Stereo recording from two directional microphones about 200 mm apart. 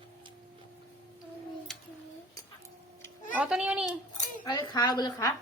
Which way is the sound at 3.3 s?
5° right (ahead or behind).